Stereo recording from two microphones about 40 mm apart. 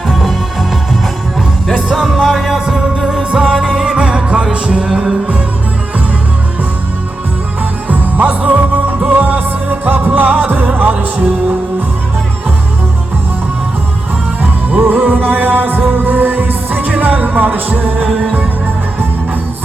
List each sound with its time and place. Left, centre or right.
0.1 s music: centre
2.1 s music: centre
7.9 s music: right
14.7 s music: right